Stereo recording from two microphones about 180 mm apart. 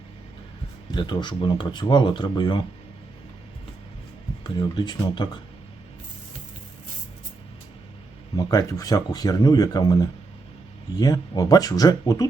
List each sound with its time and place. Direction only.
0.9 s speech: 25° left (ahead or behind)
4.4 s speech: 25° left (ahead or behind)
8.4 s speech: 20° left (ahead or behind)